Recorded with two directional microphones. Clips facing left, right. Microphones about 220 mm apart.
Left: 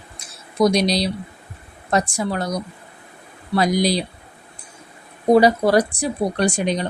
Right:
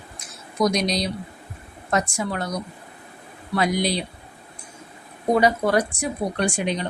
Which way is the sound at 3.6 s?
40° left (ahead or behind).